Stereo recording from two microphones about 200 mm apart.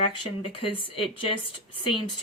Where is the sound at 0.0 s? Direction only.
25° left (ahead or behind).